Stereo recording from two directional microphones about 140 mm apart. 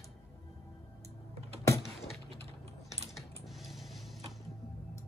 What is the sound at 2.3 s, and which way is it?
Typing, 45° right (ahead or behind).